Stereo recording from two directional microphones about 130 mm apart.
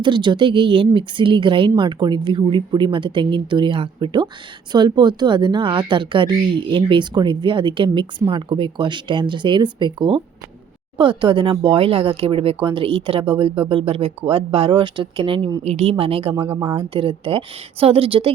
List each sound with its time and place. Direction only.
0.0 s speech: 35° right (ahead or behind)
15.6 s speech: 55° right (ahead or behind)